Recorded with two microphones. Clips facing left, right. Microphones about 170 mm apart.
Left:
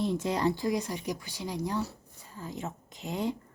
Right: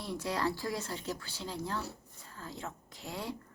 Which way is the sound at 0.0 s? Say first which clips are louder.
Left 6 dB; 20° left (ahead or behind).